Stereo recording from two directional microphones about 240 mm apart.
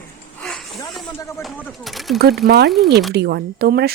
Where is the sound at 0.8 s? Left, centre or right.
Centre.